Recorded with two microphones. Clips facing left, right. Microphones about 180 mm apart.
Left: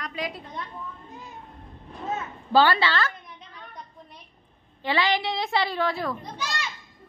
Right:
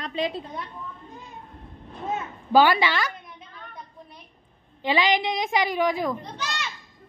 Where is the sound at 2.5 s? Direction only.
15° right (ahead or behind).